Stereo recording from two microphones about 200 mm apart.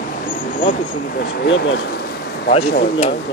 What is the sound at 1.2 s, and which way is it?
Speech, 70° left (ahead or behind).